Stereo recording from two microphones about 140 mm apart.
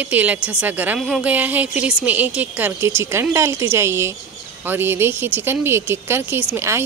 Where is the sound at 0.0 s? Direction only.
10° right (ahead or behind).